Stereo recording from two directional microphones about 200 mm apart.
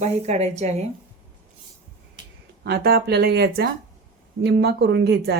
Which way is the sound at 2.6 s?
50° right (ahead or behind).